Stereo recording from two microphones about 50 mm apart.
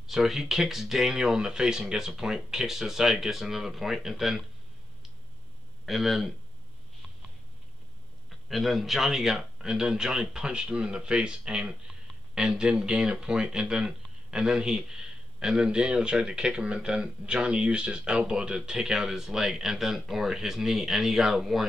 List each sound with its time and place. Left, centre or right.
0.0 s speech: centre
5.9 s speech: centre
8.5 s speech: centre